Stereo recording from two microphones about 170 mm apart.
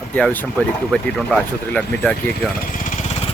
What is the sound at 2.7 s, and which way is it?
Vehicle, 45° left (ahead or behind).